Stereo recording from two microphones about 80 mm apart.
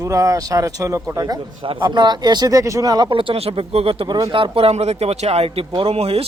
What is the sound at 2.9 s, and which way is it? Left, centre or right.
Speech, right.